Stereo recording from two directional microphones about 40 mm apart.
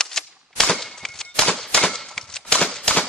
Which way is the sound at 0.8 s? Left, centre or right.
Centre.